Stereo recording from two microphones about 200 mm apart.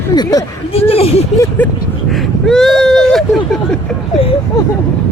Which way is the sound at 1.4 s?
10° left (ahead or behind).